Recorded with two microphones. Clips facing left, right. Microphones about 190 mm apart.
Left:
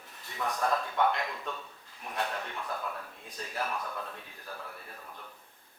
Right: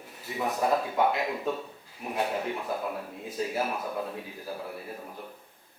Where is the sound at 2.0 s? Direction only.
10° right (ahead or behind).